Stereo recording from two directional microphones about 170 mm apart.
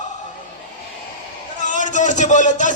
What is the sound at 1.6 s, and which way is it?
A man's voice, 45° left (ahead or behind).